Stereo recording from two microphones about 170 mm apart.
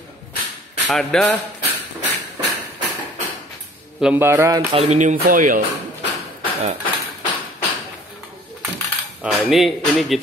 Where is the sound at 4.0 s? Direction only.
10° right (ahead or behind).